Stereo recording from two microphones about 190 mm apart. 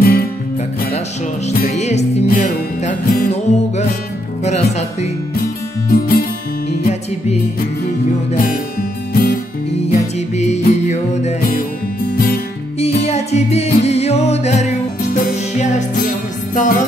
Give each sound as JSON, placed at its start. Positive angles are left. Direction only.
{"t": 0.0, "sound": "music", "side_deg": 50}
{"t": 1.7, "sound": "music", "side_deg": 35}
{"t": 5.3, "sound": "music", "side_deg": 50}
{"t": 6.8, "sound": "music", "side_deg": 35}
{"t": 9.1, "sound": "music", "side_deg": 45}
{"t": 9.8, "sound": "music", "side_deg": 35}
{"t": 12.7, "sound": "music", "side_deg": 35}
{"t": 16.5, "sound": "music", "side_deg": 45}